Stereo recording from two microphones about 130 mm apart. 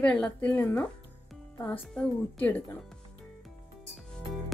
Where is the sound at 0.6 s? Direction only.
20° left (ahead or behind).